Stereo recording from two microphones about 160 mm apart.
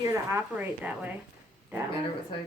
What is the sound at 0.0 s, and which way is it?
A woman's voice, 20° right (ahead or behind).